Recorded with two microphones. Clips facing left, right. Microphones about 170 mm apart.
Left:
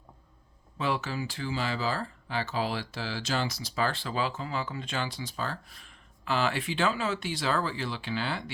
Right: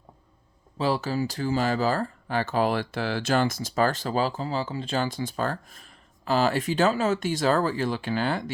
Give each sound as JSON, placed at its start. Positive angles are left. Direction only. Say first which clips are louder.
{"t": 0.8, "sound": "speech", "louder": "right 6 dB", "side_deg": -35}